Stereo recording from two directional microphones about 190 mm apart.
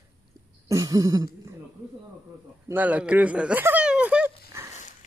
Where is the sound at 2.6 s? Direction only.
10° right (ahead or behind).